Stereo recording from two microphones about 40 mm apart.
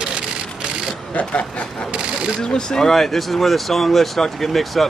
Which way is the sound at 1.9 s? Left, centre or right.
Right.